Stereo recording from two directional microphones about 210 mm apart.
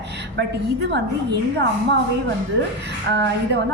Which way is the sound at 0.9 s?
55° right (ahead or behind).